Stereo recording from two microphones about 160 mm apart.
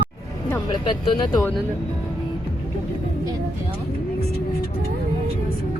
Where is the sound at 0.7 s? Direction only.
30° left (ahead or behind).